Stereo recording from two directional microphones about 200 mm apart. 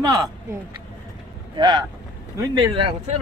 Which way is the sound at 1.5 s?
20° right (ahead or behind).